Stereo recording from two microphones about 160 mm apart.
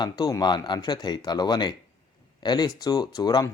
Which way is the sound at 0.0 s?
25° left (ahead or behind).